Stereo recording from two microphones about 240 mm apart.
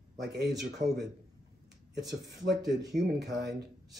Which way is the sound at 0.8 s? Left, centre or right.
Right.